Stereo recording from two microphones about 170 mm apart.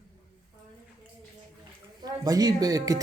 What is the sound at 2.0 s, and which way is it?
Speech, 20° right (ahead or behind).